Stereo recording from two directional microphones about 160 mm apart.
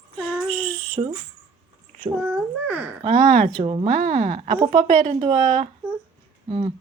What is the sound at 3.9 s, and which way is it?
A woman's voice, 50° right (ahead or behind).